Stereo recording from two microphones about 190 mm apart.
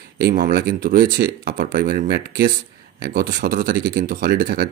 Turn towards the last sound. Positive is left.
turn(degrees=-50)  # may be behind; listen again after turning